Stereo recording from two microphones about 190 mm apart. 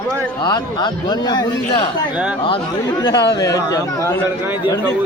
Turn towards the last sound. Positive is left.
turn(degrees=20)  # may be behind; listen again after turning